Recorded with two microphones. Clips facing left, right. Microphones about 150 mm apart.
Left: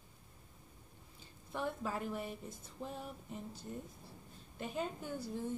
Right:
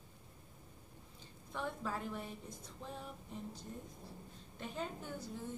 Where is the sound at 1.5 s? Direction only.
5° left (ahead or behind).